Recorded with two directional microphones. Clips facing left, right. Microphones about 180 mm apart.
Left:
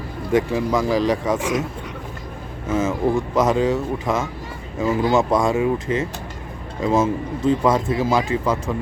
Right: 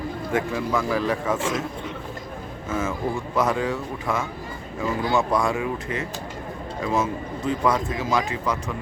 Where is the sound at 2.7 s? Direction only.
20° left (ahead or behind).